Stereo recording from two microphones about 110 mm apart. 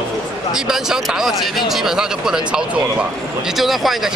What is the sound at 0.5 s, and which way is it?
Speech, 5° right (ahead or behind).